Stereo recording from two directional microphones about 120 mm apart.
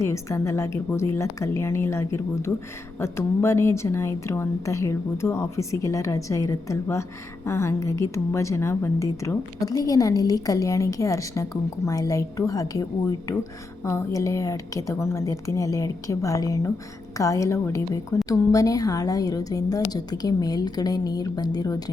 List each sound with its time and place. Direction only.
0.0 s a woman's voice: 25° left (ahead or behind)